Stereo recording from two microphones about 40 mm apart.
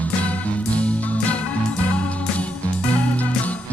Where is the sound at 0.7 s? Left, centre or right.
Left.